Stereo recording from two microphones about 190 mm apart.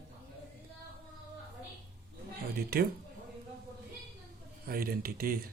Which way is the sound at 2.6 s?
55° right (ahead or behind).